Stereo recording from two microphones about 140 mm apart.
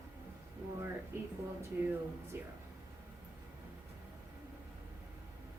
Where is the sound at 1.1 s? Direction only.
20° right (ahead or behind).